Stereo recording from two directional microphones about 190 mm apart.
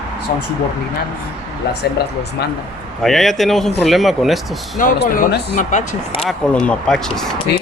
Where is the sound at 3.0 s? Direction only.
Centre (ahead or behind).